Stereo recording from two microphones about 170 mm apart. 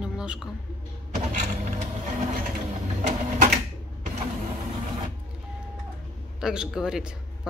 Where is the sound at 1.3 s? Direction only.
45° right (ahead or behind).